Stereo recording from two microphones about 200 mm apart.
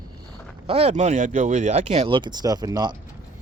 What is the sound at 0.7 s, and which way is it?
Speech, 30° right (ahead or behind).